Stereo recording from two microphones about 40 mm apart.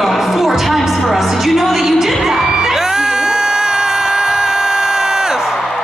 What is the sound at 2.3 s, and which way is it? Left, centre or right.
Crowd, centre.